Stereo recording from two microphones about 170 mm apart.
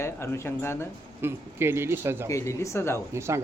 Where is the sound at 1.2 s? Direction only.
15° right (ahead or behind).